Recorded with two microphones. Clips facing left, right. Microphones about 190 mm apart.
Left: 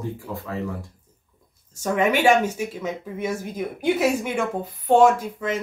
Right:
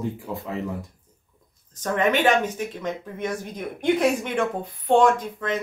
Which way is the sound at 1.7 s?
10° left (ahead or behind).